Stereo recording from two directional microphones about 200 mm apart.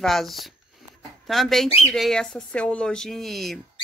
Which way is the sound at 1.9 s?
Centre (ahead or behind).